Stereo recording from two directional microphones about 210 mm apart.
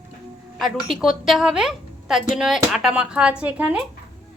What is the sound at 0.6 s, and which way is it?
A woman's voice, centre (ahead or behind).